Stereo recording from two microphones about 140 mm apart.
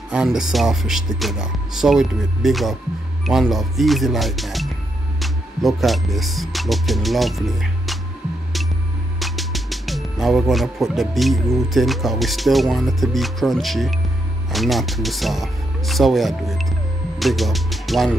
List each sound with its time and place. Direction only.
0.1 s speech: 5° right (ahead or behind)
9.2 s speech: centre (ahead or behind)